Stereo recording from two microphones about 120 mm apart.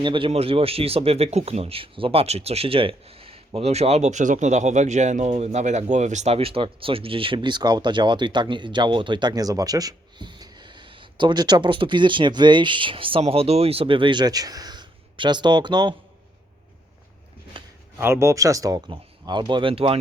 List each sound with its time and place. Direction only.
0.0 s speech: 40° right (ahead or behind)
0.3 s speech: 55° right (ahead or behind); by 16.0 s 40° right (ahead or behind)
17.5 s a sound: 45° right (ahead or behind)
17.9 s speech: 25° right (ahead or behind); by 20.0 s 50° right (ahead or behind)